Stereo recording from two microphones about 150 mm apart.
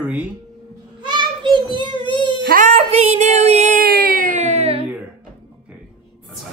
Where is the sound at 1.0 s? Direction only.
30° right (ahead or behind).